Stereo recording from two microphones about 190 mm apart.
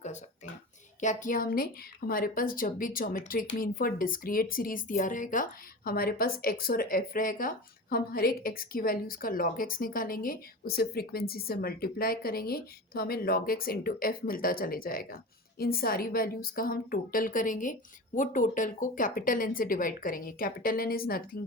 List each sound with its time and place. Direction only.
1.0 s a woman's voice: 45° left (ahead or behind)